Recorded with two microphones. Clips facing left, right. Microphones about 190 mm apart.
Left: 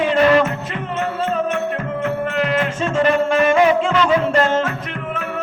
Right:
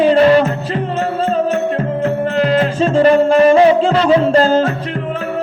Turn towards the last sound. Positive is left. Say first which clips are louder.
# right 5 dB
turn(degrees=-35)  # may be behind; listen again after turning